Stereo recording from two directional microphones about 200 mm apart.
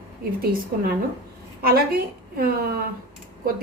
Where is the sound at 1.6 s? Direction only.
50° right (ahead or behind).